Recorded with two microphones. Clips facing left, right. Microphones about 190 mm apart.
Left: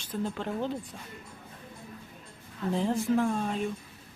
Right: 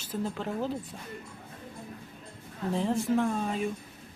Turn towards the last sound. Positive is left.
turn(degrees=0)  # may be behind; listen again after turning